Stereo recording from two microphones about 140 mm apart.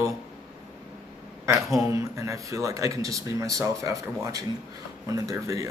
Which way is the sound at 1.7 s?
20° right (ahead or behind).